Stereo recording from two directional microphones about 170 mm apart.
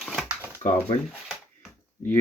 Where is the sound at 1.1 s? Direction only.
Centre (ahead or behind).